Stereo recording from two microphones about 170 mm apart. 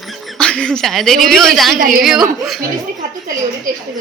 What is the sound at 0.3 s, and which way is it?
Speech, 5° left (ahead or behind).